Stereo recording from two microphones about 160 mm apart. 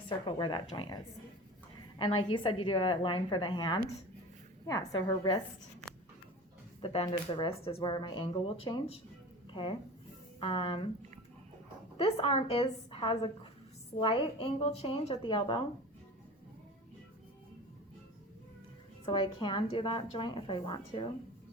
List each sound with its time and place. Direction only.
0.3 s a woman's voice: 30° left (ahead or behind)
7.0 s a woman's voice: 30° left (ahead or behind)
11.9 s a woman's voice: 40° left (ahead or behind)
19.0 s a woman's voice: 30° left (ahead or behind)